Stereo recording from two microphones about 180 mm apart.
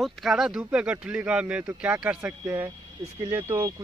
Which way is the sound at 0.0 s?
Centre (ahead or behind).